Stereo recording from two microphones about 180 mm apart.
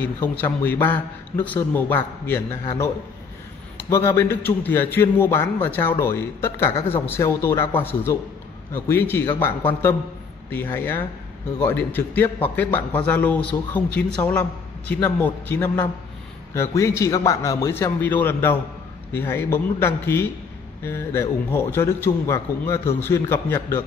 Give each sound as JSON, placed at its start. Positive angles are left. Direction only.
{"t": 0.0, "sound": "a man's voice", "side_deg": 10}
{"t": 3.7, "sound": "a man's voice", "side_deg": 15}
{"t": 10.5, "sound": "a man's voice", "side_deg": 10}